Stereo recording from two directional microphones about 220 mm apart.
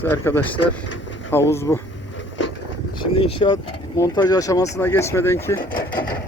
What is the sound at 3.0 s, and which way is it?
Speech, 25° left (ahead or behind).